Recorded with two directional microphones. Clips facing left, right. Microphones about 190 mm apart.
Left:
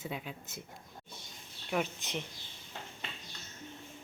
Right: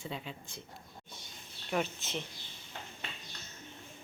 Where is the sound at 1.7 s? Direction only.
10° left (ahead or behind).